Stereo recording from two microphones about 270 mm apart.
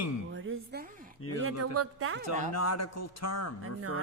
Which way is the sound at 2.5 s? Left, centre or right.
Left.